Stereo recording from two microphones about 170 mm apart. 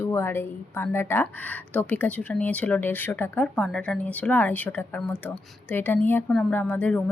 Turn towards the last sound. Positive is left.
turn(degrees=10)  # may be behind; listen again after turning